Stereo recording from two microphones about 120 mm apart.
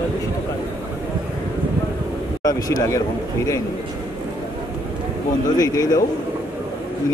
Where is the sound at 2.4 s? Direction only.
30° left (ahead or behind).